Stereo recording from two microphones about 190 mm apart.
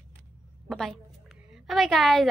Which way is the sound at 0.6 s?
Centre (ahead or behind).